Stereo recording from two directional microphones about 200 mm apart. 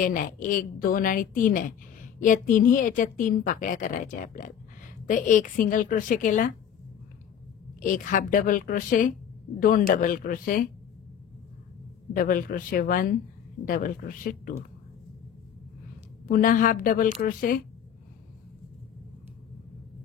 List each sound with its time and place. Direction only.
0.0 s a woman's voice: 40° left (ahead or behind)
7.8 s a woman's voice: 40° left (ahead or behind)
12.1 s a woman's voice: 45° left (ahead or behind)
16.3 s a woman's voice: 45° left (ahead or behind)